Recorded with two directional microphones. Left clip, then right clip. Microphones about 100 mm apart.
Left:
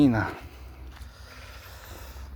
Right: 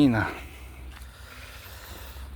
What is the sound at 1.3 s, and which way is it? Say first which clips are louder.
Vehicle: right 1 dB; 40° left (ahead or behind).